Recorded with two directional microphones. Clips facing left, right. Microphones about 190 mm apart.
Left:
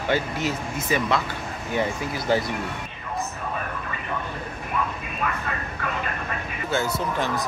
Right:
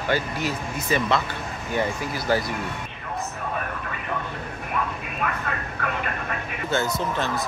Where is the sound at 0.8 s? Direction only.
10° left (ahead or behind).